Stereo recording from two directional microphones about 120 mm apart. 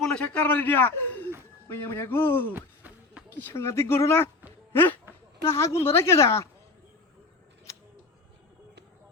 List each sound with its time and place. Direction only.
0.0 s a man's voice: 10° left (ahead or behind)
2.5 s a sound: 15° right (ahead or behind)
3.3 s speech: 20° left (ahead or behind)